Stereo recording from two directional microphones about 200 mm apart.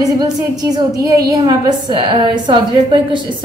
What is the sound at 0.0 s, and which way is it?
A woman's voice, 20° right (ahead or behind).